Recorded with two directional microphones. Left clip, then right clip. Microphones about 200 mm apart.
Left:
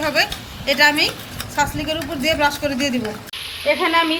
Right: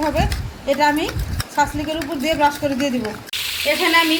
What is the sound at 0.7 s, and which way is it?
A woman's voice, 25° right (ahead or behind).